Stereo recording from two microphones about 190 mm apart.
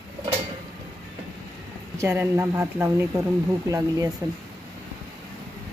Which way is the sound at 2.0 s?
15° right (ahead or behind).